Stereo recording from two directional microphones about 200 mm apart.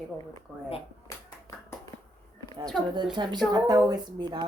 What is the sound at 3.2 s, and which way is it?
A woman's voice, 20° right (ahead or behind).